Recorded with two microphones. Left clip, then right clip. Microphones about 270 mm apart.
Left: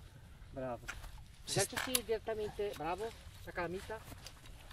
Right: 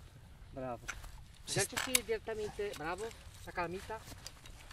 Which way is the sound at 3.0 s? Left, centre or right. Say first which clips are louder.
Left 1 dB; right.